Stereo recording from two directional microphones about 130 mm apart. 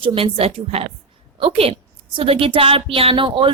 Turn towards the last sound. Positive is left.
turn(degrees=-40)  # may be behind; listen again after turning